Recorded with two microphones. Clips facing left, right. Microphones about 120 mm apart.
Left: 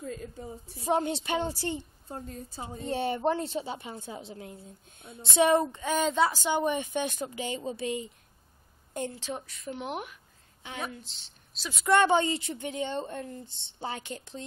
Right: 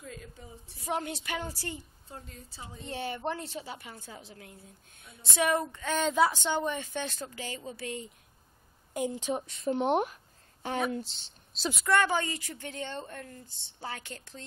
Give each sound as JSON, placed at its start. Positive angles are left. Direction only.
{"t": 0.0, "sound": "a woman's voice", "side_deg": 35}
{"t": 2.0, "sound": "a woman's voice", "side_deg": 40}
{"t": 2.9, "sound": "a woman's voice", "side_deg": 25}
{"t": 6.5, "sound": "speech", "side_deg": 15}
{"t": 8.9, "sound": "a woman's voice", "side_deg": -15}
{"t": 11.8, "sound": "a woman's voice", "side_deg": 25}